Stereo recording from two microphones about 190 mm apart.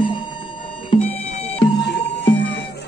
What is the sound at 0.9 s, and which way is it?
Music, 30° left (ahead or behind).